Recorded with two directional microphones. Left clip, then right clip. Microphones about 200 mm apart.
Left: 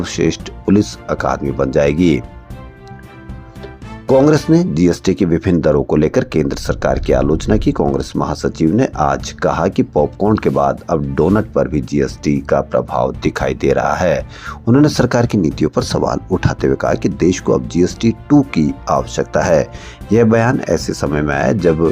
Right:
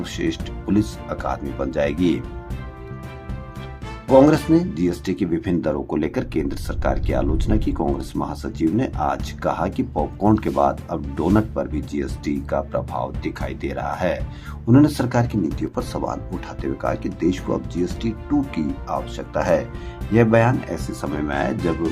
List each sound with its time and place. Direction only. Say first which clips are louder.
0.0 s speech: left 8 dB; 30° left (ahead or behind)
4.0 s speech: left 3 dB; 30° left (ahead or behind)